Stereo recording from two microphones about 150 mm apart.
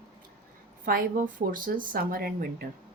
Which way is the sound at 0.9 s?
70° right (ahead or behind).